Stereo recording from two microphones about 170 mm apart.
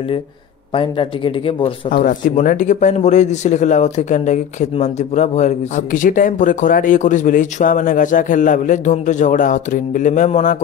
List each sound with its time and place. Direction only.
0.7 s speech: 30° left (ahead or behind)
1.9 s a man's voice: 55° left (ahead or behind)